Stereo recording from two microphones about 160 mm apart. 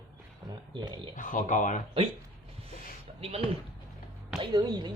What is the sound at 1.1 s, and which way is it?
Speech, 55° left (ahead or behind).